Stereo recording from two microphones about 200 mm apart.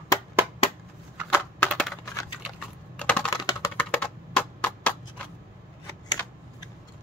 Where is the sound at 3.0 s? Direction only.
5° left (ahead or behind).